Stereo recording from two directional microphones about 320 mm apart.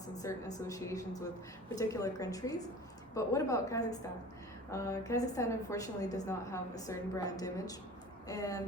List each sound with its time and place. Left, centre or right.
0.2 s a woman's voice: centre